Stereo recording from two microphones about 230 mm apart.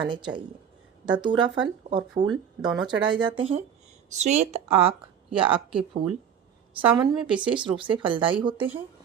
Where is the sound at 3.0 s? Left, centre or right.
Right.